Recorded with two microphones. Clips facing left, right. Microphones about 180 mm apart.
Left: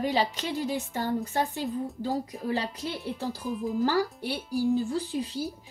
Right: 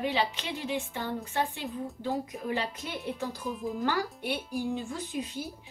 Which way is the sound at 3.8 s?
35° left (ahead or behind).